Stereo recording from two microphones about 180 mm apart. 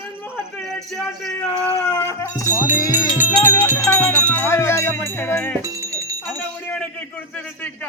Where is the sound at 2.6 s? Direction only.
10° right (ahead or behind).